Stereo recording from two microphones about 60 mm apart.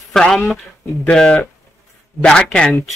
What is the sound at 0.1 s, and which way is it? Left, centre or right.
Speech, centre.